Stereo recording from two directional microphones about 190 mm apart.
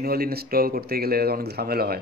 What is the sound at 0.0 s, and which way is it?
Speech, 55° right (ahead or behind).